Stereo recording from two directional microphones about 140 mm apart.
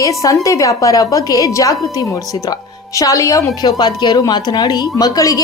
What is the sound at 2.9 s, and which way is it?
A woman's voice, 25° left (ahead or behind).